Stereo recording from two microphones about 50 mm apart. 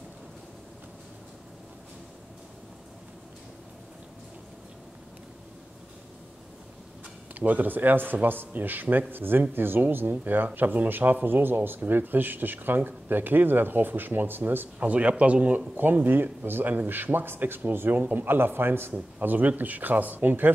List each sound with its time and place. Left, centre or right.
7.3 s speech: right
14.8 s a man's voice: right
15.7 s speech: right
18.9 s speech: right